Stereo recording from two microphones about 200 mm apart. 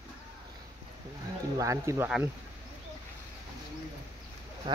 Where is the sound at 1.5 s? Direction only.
15° right (ahead or behind).